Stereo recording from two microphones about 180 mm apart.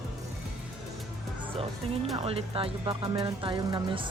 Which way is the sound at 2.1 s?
30° right (ahead or behind).